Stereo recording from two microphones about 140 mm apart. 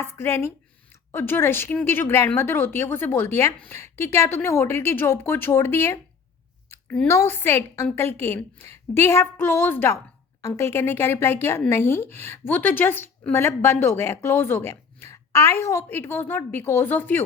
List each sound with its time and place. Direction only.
0.0 s a woman's voice: 15° left (ahead or behind)
7.1 s a woman's voice: 20° left (ahead or behind)